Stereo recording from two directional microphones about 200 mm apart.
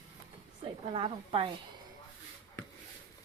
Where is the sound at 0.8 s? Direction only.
30° right (ahead or behind).